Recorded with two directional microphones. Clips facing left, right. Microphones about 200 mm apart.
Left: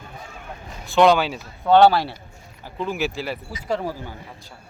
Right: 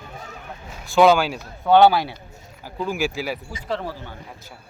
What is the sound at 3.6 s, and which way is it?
Speech, 10° left (ahead or behind).